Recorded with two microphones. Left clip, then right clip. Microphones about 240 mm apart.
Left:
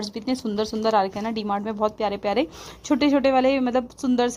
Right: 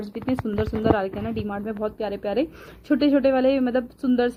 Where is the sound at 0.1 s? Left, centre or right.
Centre.